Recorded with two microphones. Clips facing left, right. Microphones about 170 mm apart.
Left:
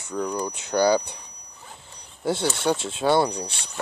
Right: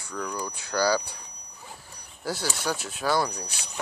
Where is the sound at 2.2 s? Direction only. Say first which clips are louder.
Left 7 dB; 25° left (ahead or behind).